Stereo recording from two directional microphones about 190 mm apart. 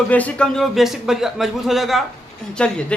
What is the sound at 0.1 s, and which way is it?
Speech, 5° left (ahead or behind).